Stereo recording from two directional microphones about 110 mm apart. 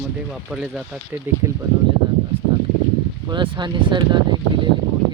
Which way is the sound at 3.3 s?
45° right (ahead or behind).